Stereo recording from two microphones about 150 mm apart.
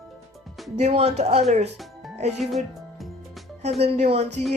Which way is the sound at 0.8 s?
45° right (ahead or behind).